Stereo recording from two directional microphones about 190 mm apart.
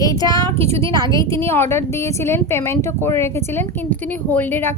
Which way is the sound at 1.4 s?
10° left (ahead or behind).